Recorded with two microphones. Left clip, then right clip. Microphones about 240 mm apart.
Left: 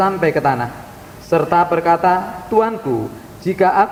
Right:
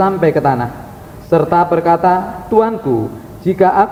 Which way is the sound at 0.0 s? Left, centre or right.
Left.